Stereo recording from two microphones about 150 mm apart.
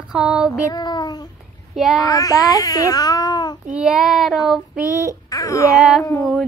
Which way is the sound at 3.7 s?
5° right (ahead or behind).